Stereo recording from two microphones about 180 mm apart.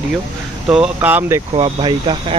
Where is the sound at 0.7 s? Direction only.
5° right (ahead or behind).